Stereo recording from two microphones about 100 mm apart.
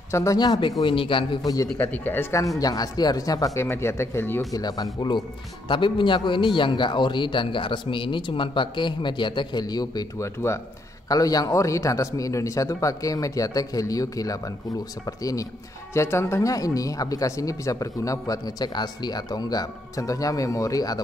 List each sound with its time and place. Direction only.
0.1 s speech: 30° left (ahead or behind)
0.4 s a man's voice: 50° left (ahead or behind)
0.8 s a man's voice: 60° left (ahead or behind)
1.4 s speech: 40° left (ahead or behind)
1.8 s speech: 20° left (ahead or behind)
2.6 s speech: 40° left (ahead or behind); by 4.4 s 25° left (ahead or behind)
4.4 s speech: 40° left (ahead or behind)
5.7 s a man's voice: 55° left (ahead or behind); by 21.0 s 40° left (ahead or behind)